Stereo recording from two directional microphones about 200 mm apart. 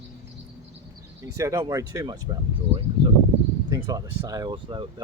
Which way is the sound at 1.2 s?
15° right (ahead or behind).